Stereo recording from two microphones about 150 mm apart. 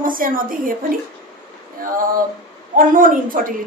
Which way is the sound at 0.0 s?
65° right (ahead or behind).